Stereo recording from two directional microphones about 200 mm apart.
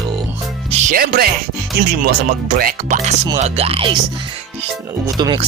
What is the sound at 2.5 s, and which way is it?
Speech, 45° right (ahead or behind).